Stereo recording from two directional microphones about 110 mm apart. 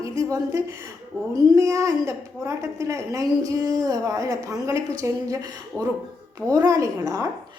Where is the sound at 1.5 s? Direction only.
30° right (ahead or behind).